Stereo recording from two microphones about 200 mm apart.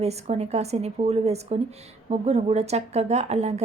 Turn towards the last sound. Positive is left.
turn(degrees=-30)  # may be behind; listen again after turning